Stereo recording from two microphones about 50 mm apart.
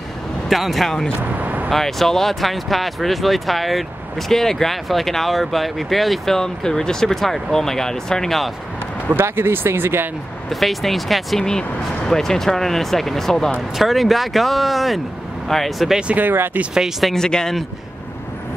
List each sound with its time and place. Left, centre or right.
0.5 s speech: centre
1.1 s vehicle: right
1.7 s speech: centre
9.2 s speech: right
10.5 s speech: centre
13.7 s speech: centre
16.2 s speech: right
17.1 s speech: centre